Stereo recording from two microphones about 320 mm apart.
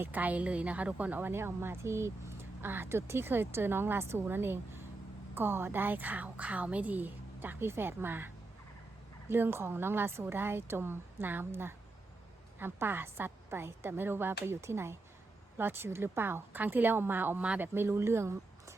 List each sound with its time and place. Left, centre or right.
0.0 s a woman's voice: centre
9.3 s a woman's voice: centre